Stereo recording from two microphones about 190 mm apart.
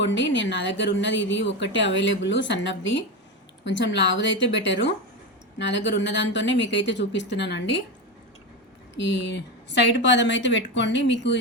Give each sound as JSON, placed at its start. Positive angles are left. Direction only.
{"t": 0.0, "sound": "a woman's voice", "side_deg": 75}
{"t": 9.0, "sound": "a woman's voice", "side_deg": 70}